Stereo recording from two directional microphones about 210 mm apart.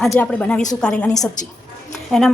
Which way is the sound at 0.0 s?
Centre (ahead or behind).